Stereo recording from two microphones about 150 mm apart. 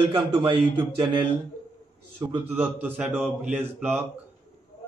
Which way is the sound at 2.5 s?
15° right (ahead or behind).